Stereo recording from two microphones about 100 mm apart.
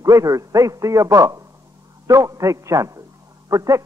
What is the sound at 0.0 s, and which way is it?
A man's voice, 35° right (ahead or behind).